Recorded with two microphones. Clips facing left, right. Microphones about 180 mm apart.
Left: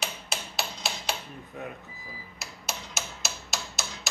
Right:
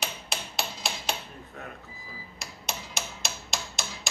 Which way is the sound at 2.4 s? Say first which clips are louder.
Right 1 dB; 5° left (ahead or behind).